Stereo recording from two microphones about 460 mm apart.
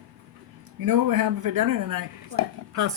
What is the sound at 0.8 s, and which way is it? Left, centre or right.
Speech, right.